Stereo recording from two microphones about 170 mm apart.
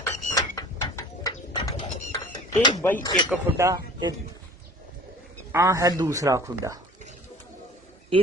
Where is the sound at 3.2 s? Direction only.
15° right (ahead or behind).